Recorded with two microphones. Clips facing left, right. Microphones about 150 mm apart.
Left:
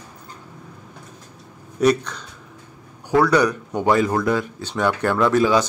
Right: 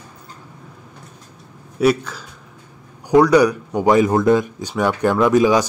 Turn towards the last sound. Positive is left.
turn(degrees=-15)  # may be behind; listen again after turning